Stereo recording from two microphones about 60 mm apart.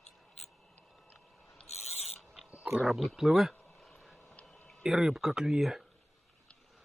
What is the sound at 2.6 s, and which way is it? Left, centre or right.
Speech, centre.